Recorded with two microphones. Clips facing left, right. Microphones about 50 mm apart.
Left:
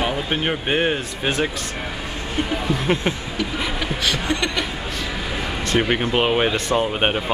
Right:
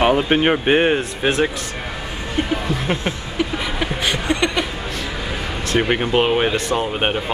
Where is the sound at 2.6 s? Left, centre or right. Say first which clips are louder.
Left 1 dB; centre.